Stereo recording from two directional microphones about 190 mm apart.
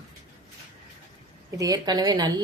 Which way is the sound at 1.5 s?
20° right (ahead or behind).